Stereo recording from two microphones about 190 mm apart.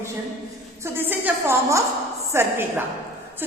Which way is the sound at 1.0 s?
10° right (ahead or behind).